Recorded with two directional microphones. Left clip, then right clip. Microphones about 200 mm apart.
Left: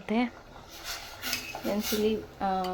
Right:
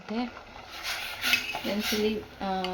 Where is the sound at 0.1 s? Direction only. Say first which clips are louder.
Left 4 dB; 15° left (ahead or behind).